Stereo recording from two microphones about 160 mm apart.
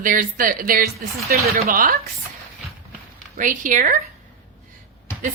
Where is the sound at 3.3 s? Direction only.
55° right (ahead or behind).